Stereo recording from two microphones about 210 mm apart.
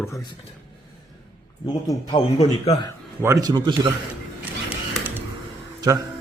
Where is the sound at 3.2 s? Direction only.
15° right (ahead or behind).